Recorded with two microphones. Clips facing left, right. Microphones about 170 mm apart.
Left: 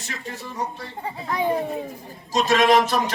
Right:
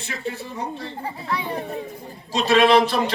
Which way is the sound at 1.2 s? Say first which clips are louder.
Left 6 dB; 45° left (ahead or behind).